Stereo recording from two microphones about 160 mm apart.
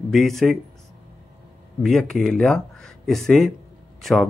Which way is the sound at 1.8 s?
Centre (ahead or behind).